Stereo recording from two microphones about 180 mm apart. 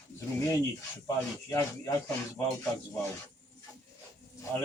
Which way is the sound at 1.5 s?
15° left (ahead or behind).